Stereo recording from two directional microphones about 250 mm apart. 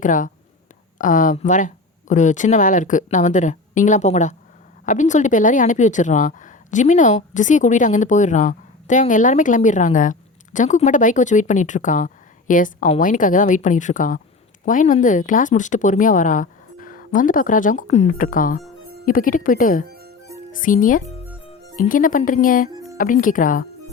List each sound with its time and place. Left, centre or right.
0.0 s a woman's voice: left